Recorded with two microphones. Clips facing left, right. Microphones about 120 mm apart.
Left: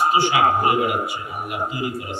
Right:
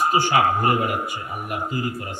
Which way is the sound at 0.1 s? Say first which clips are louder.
Left 1 dB; 45° right (ahead or behind).